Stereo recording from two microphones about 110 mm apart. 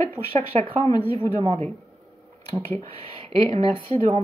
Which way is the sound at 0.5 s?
75° right (ahead or behind).